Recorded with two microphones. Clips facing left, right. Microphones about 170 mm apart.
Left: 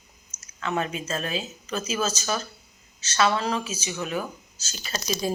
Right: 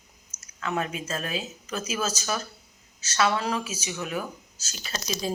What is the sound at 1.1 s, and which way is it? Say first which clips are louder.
Speech: left 2 dB; 30° left (ahead or behind).